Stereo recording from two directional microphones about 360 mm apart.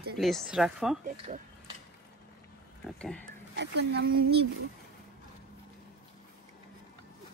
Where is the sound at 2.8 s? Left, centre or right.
Centre.